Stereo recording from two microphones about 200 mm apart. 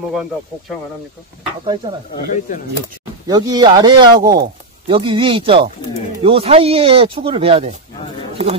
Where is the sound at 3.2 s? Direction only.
20° right (ahead or behind).